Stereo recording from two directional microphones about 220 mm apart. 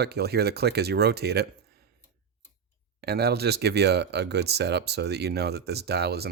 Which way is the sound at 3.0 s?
45° right (ahead or behind).